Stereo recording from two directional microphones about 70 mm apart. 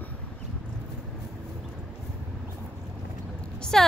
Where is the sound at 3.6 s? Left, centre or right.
Centre.